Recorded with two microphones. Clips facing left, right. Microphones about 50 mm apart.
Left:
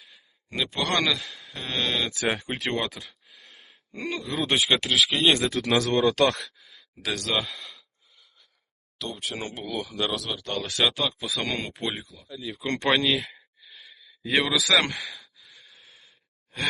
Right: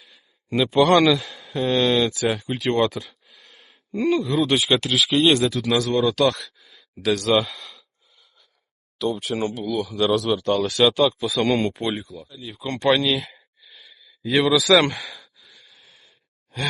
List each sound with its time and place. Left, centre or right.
0.0 s a sound: centre
0.7 s speech: centre
2.3 s speech: left
2.7 s a sound: centre
4.4 s speech: left
5.1 s speech: centre
5.4 s speech: left
6.6 s gasp: centre
9.0 s speech: centre
9.5 s speech: left
9.9 s speech: centre
12.9 s speech: left
14.4 s speech: centre
15.7 s sigh: centre